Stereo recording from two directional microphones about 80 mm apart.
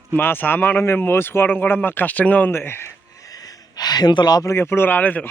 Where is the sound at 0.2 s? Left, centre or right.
Left.